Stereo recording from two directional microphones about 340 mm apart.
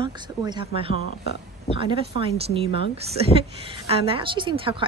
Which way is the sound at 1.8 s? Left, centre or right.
Centre.